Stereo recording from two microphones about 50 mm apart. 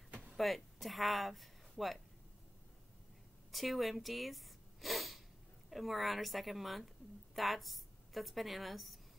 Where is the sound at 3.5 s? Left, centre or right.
Centre.